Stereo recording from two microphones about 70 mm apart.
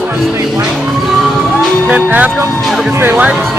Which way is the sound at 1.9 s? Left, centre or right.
Right.